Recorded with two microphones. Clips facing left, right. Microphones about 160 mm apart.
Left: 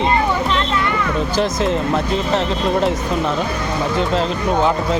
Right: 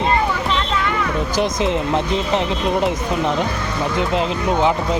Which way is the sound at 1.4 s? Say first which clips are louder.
Even; 15° right (ahead or behind).